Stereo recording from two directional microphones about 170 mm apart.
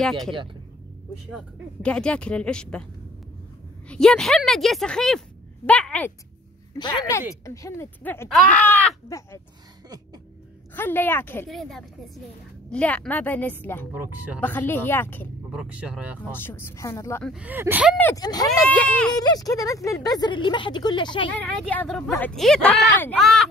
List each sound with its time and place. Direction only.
1.3 s speech: 5° left (ahead or behind)
3.9 s speech: 5° left (ahead or behind)
6.7 s speech: 25° left (ahead or behind)
10.7 s speech: 10° left (ahead or behind)
11.4 s speech: centre (ahead or behind)
13.9 s speech: 10° right (ahead or behind)
14.4 s speech: 10° left (ahead or behind)
15.5 s speech: 5° right (ahead or behind)
16.3 s speech: 15° left (ahead or behind)
17.2 s speech: 5° right (ahead or behind)
18.1 s speech: 20° left (ahead or behind)
18.9 s speech: 5° left (ahead or behind)
19.1 s speech: 20° left (ahead or behind)
21.3 s speech: 10° left (ahead or behind)